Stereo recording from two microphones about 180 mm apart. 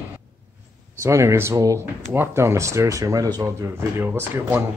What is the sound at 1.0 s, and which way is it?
Speech, 15° right (ahead or behind).